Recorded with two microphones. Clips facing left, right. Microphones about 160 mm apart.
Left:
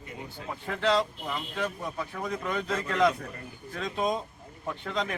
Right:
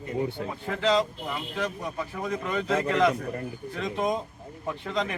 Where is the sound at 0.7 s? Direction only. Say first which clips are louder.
Right 2 dB; centre (ahead or behind).